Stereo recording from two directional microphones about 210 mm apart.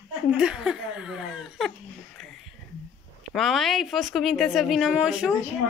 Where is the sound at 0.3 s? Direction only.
5° right (ahead or behind).